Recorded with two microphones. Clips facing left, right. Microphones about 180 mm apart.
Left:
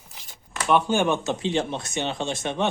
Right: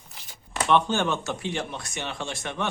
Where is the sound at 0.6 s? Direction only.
10° left (ahead or behind).